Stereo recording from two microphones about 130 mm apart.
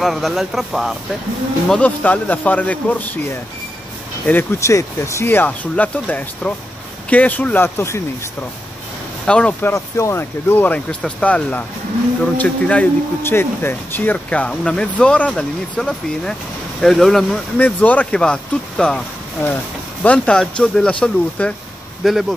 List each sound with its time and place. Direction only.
0.0 s speech: centre (ahead or behind)
1.7 s speech: 10° left (ahead or behind)
4.3 s speech: 15° left (ahead or behind)
9.2 s speech: 5° left (ahead or behind)